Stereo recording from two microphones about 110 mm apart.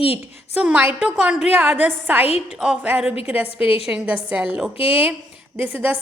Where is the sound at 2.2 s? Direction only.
70° left (ahead or behind).